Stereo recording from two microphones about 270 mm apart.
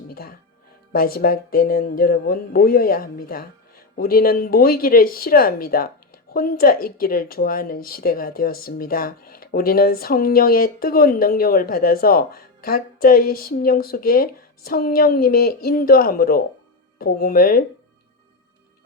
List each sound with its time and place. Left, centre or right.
0.1 s music: left
0.9 s speech: left